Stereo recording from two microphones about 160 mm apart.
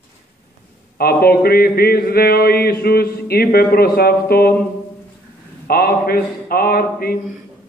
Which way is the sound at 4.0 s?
75° left (ahead or behind).